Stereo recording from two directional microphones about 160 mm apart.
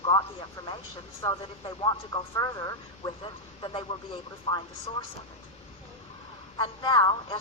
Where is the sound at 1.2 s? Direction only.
25° left (ahead or behind).